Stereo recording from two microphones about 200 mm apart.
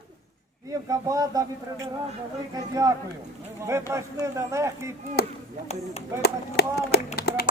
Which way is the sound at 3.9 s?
15° right (ahead or behind).